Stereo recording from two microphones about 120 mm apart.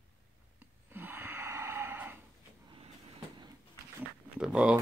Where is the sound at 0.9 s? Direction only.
15° right (ahead or behind).